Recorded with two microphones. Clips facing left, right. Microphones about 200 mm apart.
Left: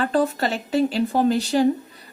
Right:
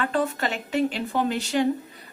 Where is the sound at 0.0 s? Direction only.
35° left (ahead or behind).